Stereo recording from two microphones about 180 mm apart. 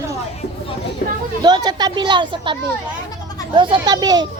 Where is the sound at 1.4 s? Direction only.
20° right (ahead or behind).